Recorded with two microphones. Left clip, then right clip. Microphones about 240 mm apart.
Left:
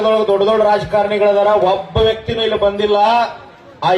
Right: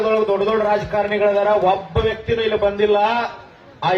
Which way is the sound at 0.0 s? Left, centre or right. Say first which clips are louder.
Left 4 dB; left.